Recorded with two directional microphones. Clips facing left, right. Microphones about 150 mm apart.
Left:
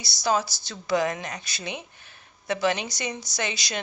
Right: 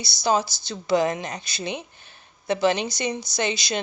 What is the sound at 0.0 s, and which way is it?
A woman's voice, 25° right (ahead or behind).